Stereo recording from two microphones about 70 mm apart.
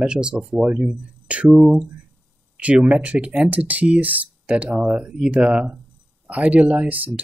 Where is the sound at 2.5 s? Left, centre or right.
Centre.